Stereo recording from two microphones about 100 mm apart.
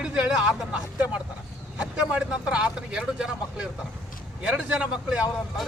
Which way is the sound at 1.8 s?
10° right (ahead or behind).